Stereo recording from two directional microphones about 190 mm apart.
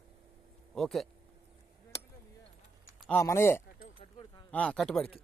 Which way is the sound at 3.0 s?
10° left (ahead or behind).